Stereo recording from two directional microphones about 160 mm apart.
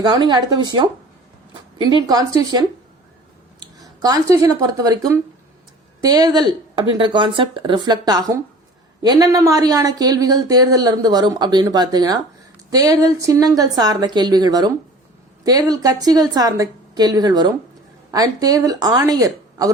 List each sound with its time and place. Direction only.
0.0 s speech: 25° right (ahead or behind)